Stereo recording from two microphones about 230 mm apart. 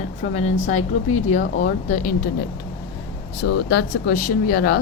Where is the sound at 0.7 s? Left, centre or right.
Left.